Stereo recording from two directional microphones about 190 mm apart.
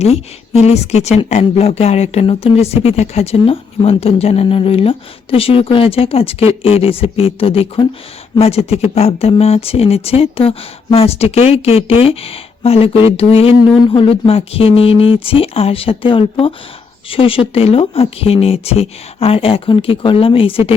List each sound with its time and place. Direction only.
0.0 s speech: 35° left (ahead or behind)